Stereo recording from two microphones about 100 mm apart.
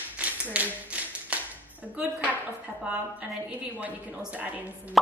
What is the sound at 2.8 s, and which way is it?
A woman's voice, 15° right (ahead or behind).